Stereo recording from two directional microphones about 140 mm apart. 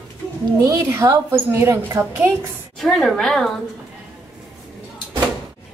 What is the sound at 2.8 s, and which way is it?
Speech, centre (ahead or behind).